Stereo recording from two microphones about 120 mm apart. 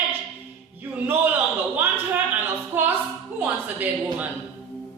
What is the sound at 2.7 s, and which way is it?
Music, 15° right (ahead or behind).